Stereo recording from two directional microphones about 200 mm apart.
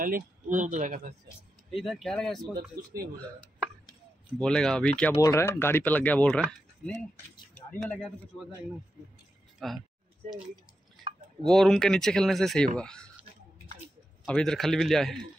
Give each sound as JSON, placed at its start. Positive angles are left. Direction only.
{"t": 0.0, "sound": "speech", "side_deg": -45}
{"t": 1.7, "sound": "speech", "side_deg": 0}
{"t": 2.8, "sound": "speech", "side_deg": -50}
{"t": 4.4, "sound": "speech", "side_deg": 5}
{"t": 9.6, "sound": "speech", "side_deg": 0}
{"t": 11.4, "sound": "speech", "side_deg": 0}
{"t": 14.2, "sound": "speech", "side_deg": 5}